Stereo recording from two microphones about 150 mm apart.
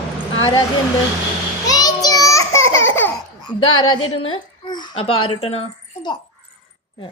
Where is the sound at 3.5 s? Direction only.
35° left (ahead or behind).